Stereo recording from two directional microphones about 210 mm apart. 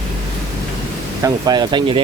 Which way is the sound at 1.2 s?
20° right (ahead or behind).